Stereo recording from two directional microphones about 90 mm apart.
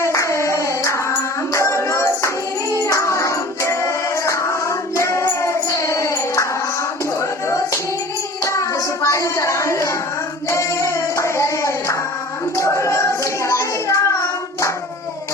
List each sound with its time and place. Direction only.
0.0 s hands: 35° left (ahead or behind)
1.5 s music: 30° left (ahead or behind)
8.4 s a sound: 35° left (ahead or behind)
12.5 s child singing: 35° left (ahead or behind)